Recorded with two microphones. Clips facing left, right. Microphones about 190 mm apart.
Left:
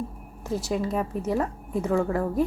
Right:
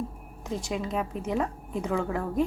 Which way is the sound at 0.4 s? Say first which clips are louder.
Left 4 dB; 5° left (ahead or behind).